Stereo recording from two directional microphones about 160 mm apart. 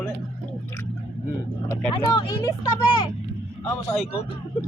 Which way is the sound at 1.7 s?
25° left (ahead or behind).